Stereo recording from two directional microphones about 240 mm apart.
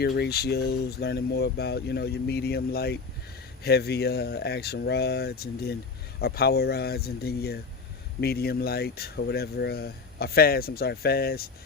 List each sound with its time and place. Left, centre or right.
0.0 s speech: left